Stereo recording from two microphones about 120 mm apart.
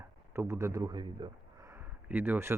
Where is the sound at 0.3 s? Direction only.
20° right (ahead or behind).